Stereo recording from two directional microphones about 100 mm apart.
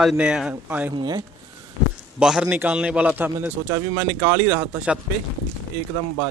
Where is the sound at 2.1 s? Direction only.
10° right (ahead or behind); by 4.7 s 25° right (ahead or behind).